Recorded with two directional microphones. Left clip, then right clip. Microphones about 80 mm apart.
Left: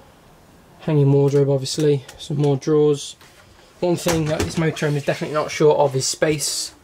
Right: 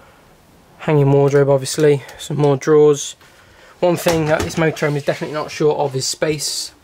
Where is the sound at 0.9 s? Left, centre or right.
Left.